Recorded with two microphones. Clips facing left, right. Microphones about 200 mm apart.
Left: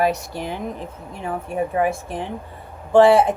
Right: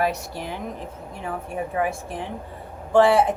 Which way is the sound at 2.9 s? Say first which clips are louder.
Left 4 dB; 25° left (ahead or behind).